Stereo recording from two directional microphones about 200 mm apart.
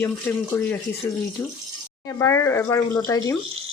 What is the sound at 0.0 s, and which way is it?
Speech, 10° left (ahead or behind).